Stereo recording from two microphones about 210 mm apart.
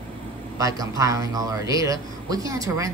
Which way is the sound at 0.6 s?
15° right (ahead or behind).